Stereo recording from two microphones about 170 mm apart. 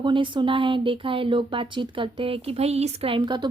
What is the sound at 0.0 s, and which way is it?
A woman's voice, 30° right (ahead or behind).